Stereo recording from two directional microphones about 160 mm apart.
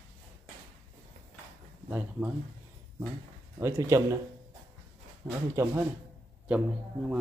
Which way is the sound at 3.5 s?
15° right (ahead or behind).